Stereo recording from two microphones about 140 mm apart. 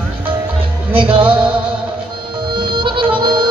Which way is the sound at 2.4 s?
35° right (ahead or behind).